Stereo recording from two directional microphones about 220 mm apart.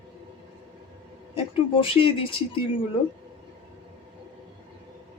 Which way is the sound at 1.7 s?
25° left (ahead or behind).